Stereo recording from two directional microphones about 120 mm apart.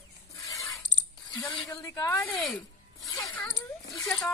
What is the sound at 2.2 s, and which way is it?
Speech, 15° left (ahead or behind).